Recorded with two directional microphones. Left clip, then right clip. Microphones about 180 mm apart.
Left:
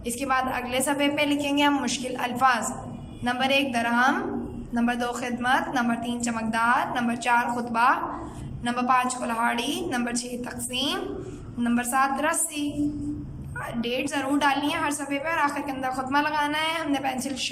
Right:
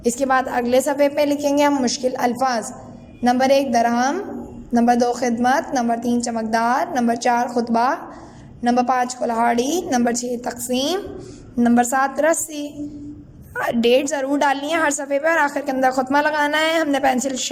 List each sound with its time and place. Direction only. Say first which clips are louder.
0.0 s a woman's voice: right 7 dB; 45° right (ahead or behind)